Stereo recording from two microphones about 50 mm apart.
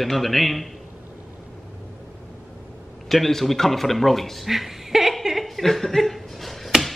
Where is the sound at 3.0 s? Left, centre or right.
Centre.